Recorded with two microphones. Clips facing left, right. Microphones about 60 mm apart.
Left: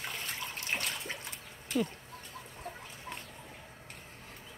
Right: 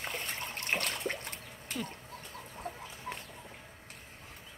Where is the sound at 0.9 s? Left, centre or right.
Right.